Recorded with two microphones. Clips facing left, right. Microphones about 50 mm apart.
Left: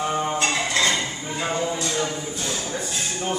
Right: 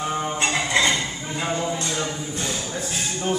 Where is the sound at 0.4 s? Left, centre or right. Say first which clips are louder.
Right 1 dB; centre.